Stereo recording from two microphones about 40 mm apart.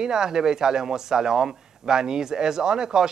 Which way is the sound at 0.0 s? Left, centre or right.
Centre.